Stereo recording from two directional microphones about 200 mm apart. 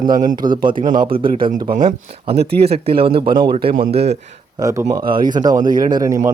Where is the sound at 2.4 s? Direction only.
55° right (ahead or behind).